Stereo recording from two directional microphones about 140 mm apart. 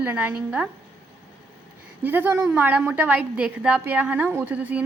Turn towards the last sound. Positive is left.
turn(degrees=-10)  # may be behind; listen again after turning